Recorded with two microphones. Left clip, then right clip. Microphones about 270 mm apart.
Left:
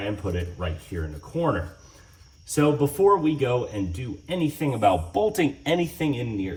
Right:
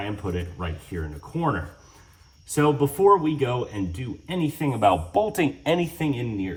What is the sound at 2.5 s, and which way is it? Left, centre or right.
Speech, centre.